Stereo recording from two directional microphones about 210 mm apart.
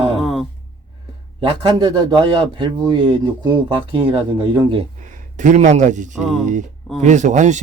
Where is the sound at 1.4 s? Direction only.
20° right (ahead or behind).